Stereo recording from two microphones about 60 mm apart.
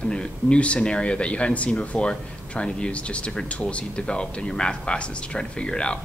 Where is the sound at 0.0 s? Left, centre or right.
Centre.